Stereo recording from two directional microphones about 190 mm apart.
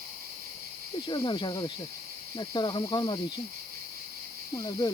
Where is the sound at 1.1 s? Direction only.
25° left (ahead or behind).